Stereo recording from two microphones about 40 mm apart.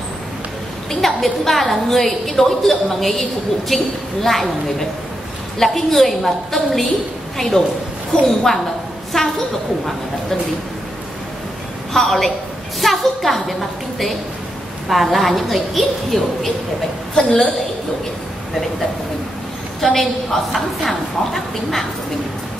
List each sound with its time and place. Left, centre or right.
1.0 s a woman's voice: centre
11.9 s a woman's voice: centre
19.8 s a woman's voice: centre